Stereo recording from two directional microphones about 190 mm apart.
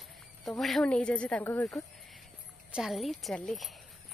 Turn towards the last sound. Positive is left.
turn(degrees=0)  # may be behind; listen again after turning